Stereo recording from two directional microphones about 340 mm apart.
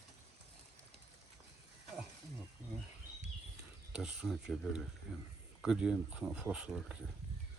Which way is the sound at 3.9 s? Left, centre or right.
Centre.